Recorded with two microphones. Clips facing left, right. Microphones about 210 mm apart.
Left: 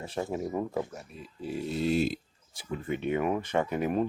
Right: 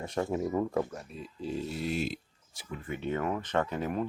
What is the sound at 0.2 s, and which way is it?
Speech, 15° left (ahead or behind).